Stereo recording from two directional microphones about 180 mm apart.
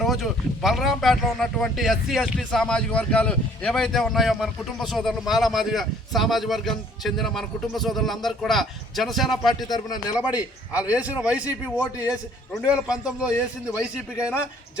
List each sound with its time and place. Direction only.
0.0 s speech: centre (ahead or behind)
9.6 s a man's voice: 20° left (ahead or behind)
10.3 s a man's voice: 10° right (ahead or behind)